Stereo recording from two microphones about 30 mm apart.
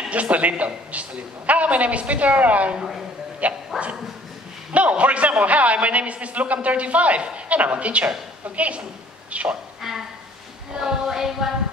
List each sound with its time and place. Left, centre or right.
0.1 s a man's voice: right
2.8 s music: centre
3.4 s a man's voice: right
4.7 s a man's voice: right
9.8 s a sound: centre
10.7 s speech: right
11.1 s music: centre